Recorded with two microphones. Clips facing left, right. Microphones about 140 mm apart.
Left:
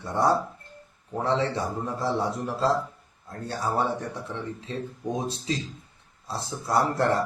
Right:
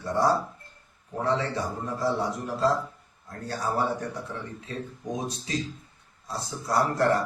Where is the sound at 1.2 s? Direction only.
25° left (ahead or behind).